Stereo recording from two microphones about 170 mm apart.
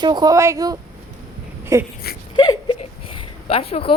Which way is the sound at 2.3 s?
25° left (ahead or behind).